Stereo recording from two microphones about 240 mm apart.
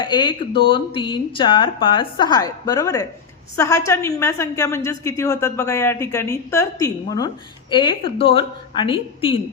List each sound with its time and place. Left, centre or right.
0.0 s a woman's voice: centre